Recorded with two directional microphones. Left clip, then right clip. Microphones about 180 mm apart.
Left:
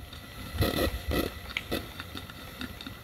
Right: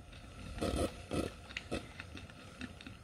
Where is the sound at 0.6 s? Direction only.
10° right (ahead or behind).